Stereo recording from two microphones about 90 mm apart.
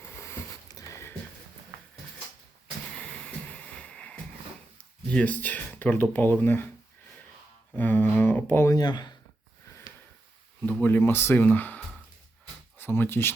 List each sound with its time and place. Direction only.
0.0 s a sound: 30° left (ahead or behind)
0.7 s a sound: 40° left (ahead or behind)
2.9 s music: 10° left (ahead or behind)
5.0 s speech: 15° left (ahead or behind)
7.8 s speech: 20° left (ahead or behind)
8.7 s speech: 50° left (ahead or behind)
10.7 s speech: 20° left (ahead or behind)